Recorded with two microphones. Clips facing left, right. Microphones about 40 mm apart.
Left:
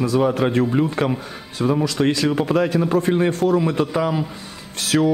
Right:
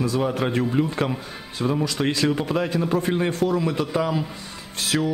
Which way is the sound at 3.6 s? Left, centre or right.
Centre.